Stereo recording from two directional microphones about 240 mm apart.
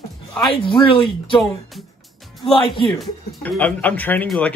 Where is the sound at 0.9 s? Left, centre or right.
Left.